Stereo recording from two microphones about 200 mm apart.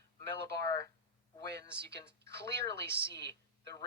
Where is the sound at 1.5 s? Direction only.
55° right (ahead or behind).